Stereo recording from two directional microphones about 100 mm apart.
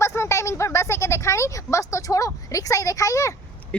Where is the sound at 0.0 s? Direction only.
30° left (ahead or behind).